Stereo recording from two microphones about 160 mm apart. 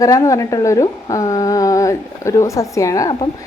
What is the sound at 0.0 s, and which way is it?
A woman's voice, 20° left (ahead or behind).